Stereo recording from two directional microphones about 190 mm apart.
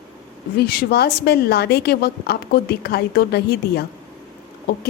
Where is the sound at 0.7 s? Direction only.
55° left (ahead or behind).